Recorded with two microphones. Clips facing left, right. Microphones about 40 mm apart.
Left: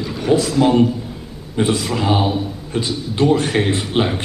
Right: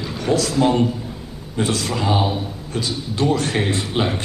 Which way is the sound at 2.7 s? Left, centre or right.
Left.